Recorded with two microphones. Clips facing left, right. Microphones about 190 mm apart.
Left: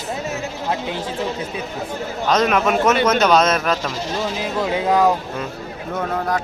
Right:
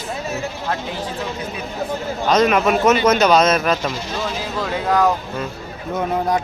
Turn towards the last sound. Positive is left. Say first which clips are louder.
# right 2 dB
turn(degrees=-20)  # may be behind; listen again after turning